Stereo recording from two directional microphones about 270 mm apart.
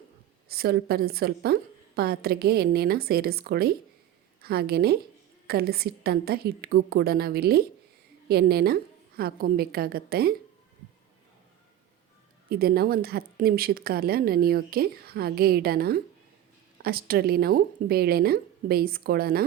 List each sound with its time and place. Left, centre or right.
0.5 s a woman's voice: right
12.5 s a woman's voice: right